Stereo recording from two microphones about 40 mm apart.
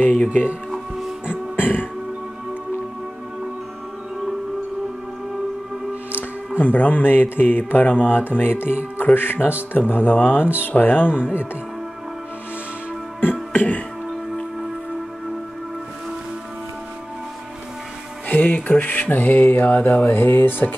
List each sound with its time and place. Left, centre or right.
0.0 s speech: left
0.7 s music: centre
1.6 s music: left
6.6 s mantra: left
9.1 s speech: left
13.5 s music: left
18.3 s mantra: left
20.1 s speech: left